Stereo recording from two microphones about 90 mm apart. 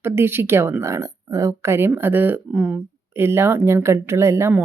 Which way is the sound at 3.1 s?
25° right (ahead or behind).